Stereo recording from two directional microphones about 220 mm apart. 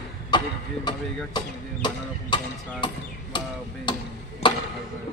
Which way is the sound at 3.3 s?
20° left (ahead or behind).